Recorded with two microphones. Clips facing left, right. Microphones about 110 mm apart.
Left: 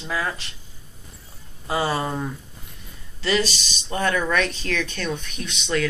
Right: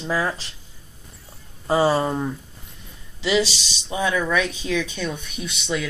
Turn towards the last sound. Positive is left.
turn(degrees=-10)  # may be behind; listen again after turning